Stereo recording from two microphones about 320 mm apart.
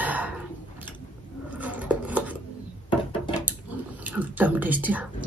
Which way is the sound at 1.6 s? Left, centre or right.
Centre.